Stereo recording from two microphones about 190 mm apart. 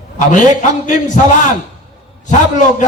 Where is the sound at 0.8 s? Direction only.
40° left (ahead or behind).